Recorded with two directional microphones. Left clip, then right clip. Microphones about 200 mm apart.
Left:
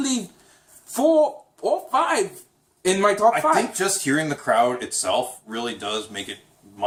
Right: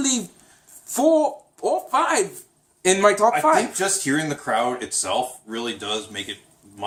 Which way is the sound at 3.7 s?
Centre (ahead or behind).